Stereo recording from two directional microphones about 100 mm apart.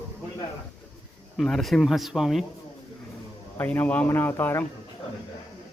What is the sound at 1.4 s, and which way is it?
Speech, centre (ahead or behind).